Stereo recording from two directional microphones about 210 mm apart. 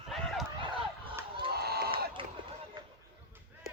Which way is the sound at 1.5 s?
50° right (ahead or behind).